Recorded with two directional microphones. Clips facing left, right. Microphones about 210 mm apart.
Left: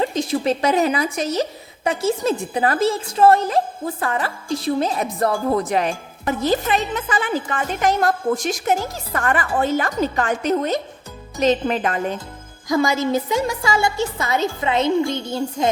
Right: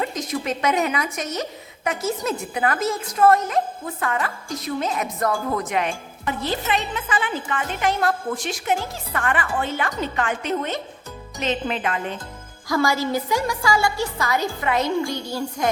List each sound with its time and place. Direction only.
0.0 s a woman's voice: 30° left (ahead or behind)
12.6 s a woman's voice: 20° left (ahead or behind)